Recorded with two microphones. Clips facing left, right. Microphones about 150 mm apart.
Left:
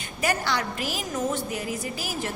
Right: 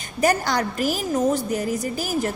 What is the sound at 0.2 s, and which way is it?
A woman's voice, 40° right (ahead or behind).